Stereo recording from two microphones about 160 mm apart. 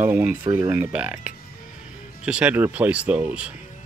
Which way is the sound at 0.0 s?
10° right (ahead or behind).